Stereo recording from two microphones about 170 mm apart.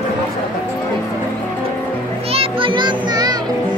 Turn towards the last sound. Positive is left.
turn(degrees=-25)  # may be behind; listen again after turning